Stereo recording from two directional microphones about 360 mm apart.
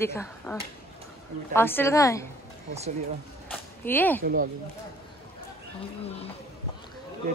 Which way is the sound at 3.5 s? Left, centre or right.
Centre.